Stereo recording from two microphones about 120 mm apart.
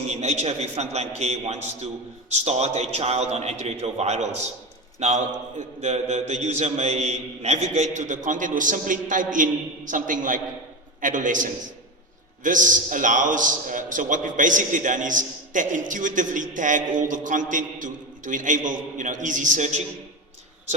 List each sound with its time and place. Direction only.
0.1 s a man's voice: 65° right (ahead or behind); by 19.8 s 85° right